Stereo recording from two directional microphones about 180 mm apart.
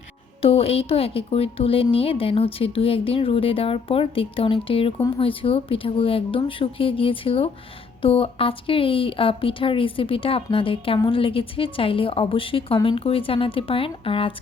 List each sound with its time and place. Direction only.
0.4 s speech: 30° left (ahead or behind)